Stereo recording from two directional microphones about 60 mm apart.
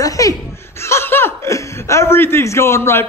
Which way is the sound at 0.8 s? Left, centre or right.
Left.